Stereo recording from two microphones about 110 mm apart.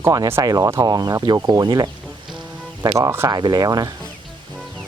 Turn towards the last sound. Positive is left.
turn(degrees=-35)  # may be behind; listen again after turning